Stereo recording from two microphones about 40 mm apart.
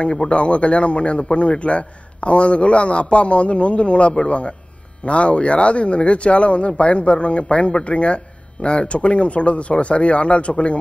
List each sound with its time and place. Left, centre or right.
0.0 s speech: left